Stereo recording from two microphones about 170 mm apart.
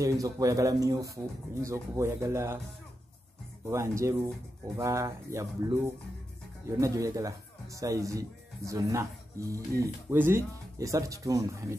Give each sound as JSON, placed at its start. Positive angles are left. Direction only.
{"t": 0.0, "sound": "speech", "side_deg": -20}
{"t": 3.6, "sound": "speech", "side_deg": -15}